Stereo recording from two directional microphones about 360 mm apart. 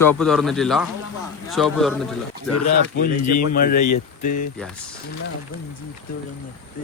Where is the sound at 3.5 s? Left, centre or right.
Left.